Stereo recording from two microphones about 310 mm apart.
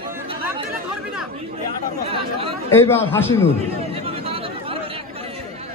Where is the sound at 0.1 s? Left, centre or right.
Centre.